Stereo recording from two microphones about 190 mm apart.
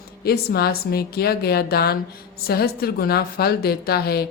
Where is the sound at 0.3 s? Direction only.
55° left (ahead or behind).